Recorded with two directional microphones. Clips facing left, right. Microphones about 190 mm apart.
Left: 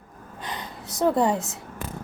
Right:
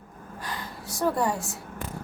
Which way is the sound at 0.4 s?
20° left (ahead or behind).